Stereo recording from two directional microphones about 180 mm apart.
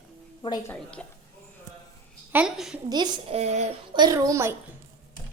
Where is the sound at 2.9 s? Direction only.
25° right (ahead or behind).